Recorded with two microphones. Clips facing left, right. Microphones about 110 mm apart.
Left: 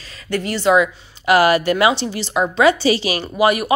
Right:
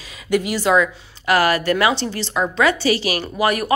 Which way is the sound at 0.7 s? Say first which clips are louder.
Left 2 dB; 15° left (ahead or behind).